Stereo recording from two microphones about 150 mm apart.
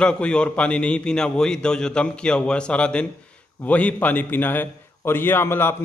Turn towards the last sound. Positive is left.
turn(degrees=15)  # may be behind; listen again after turning